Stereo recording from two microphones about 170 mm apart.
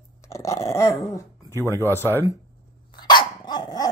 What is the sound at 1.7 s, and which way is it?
Speech, 15° left (ahead or behind).